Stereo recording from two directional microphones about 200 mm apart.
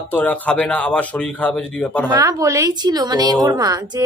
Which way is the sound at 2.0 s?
20° right (ahead or behind).